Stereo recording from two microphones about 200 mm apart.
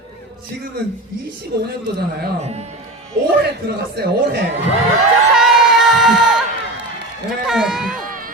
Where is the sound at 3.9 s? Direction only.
55° right (ahead or behind).